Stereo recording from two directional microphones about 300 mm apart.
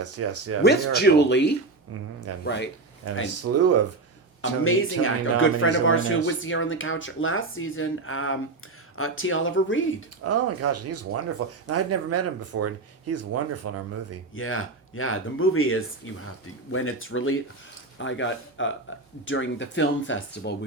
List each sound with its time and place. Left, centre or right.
0.0 s speech: right
0.6 s speech: left
3.4 s speech: right
4.4 s speech: left
10.2 s speech: right
14.3 s speech: left